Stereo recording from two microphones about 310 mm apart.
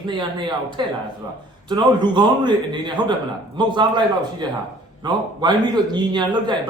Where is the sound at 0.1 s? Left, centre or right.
Centre.